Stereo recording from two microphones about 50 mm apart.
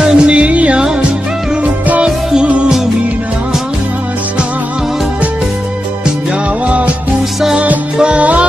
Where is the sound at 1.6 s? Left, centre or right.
Right.